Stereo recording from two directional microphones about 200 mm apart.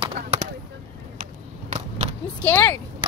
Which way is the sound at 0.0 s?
30° right (ahead or behind).